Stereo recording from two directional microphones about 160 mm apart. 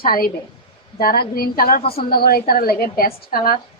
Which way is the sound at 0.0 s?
65° left (ahead or behind).